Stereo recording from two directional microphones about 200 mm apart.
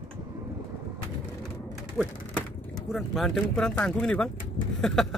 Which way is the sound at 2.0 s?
5° right (ahead or behind).